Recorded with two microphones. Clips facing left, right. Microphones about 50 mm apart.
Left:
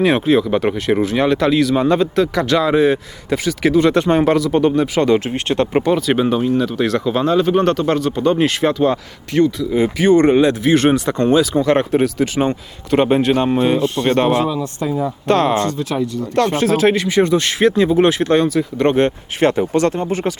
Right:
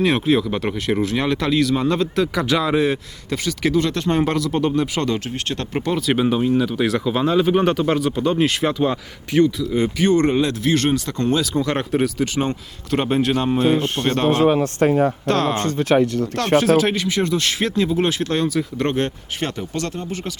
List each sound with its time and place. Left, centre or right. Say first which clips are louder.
0.0 s speech: left 4 dB; centre
3.8 s speech: left 8 dB; centre
4.1 s speech: left 5 dB; centre
5.8 s speech: left 4 dB; centre
11.6 s speech: left 6 dB; centre
13.7 s speech: left 4 dB; right
14.0 s speech: left 5 dB; left
14.4 s speech: right 4 dB; right
15.3 s speech: left 10 dB; centre
15.8 s speech: right 4 dB; right
16.7 s speech: left 4 dB; centre
18.9 s speech: left 7 dB; centre